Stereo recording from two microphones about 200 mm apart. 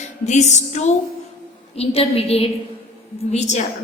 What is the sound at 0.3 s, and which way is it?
A woman's voice, 35° left (ahead or behind).